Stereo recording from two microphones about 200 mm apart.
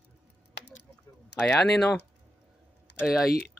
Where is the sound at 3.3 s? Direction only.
50° left (ahead or behind).